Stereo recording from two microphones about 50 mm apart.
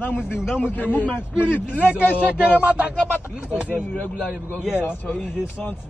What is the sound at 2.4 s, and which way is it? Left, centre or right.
Speech, right.